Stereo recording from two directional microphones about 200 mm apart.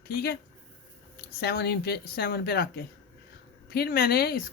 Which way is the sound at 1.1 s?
50° left (ahead or behind).